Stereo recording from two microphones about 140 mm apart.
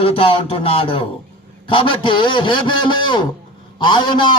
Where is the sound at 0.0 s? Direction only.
40° left (ahead or behind).